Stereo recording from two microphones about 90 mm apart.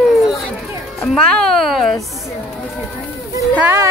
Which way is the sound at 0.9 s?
5° left (ahead or behind).